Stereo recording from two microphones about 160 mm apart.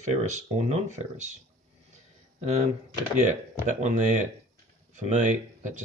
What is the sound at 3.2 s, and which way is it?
Speech, 45° right (ahead or behind).